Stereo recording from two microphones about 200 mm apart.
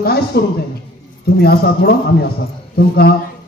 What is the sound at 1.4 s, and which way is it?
Speech, 50° left (ahead or behind).